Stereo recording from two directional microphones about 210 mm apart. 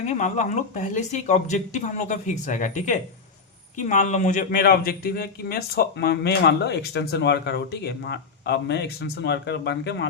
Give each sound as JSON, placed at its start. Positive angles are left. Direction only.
{"t": 0.0, "sound": "speech", "side_deg": 35}